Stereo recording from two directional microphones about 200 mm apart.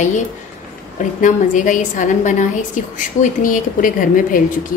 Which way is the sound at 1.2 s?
40° left (ahead or behind).